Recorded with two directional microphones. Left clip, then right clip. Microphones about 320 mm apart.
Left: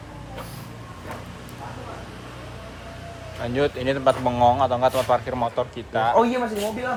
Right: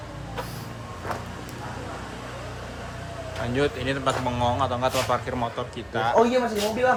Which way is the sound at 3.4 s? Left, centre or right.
Centre.